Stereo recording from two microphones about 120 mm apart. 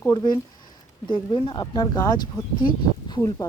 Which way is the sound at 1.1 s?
45° left (ahead or behind).